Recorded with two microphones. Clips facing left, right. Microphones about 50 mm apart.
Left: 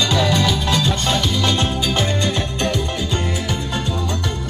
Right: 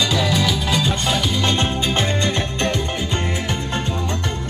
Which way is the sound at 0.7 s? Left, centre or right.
Centre.